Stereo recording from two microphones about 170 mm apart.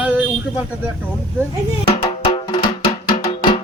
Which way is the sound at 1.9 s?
30° left (ahead or behind).